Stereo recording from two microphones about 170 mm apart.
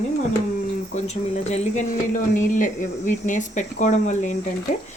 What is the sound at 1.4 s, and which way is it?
Speech, 40° left (ahead or behind).